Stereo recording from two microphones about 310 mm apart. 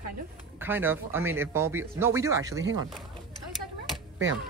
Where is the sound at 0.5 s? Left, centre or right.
Centre.